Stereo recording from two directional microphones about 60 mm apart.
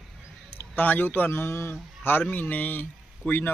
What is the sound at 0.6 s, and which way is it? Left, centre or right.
Speech, left.